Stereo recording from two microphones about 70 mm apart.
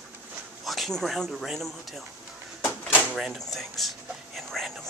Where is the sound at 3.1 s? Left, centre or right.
Centre.